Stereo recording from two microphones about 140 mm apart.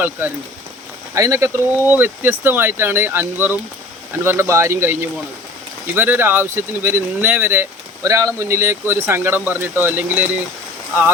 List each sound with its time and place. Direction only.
0.0 s speech: 15° right (ahead or behind)